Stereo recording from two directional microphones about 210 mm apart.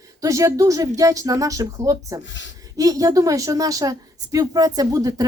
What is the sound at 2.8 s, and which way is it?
Speech, 15° right (ahead or behind).